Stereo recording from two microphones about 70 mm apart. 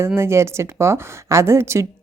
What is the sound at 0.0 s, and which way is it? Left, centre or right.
A woman's voice, right.